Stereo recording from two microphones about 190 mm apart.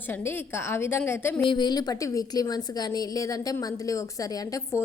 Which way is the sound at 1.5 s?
20° left (ahead or behind).